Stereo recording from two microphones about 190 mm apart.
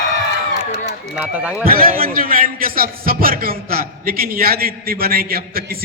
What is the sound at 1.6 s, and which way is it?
A man's voice, 50° right (ahead or behind).